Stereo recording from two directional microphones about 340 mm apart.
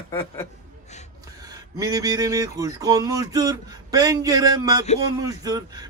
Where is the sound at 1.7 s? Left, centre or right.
Centre.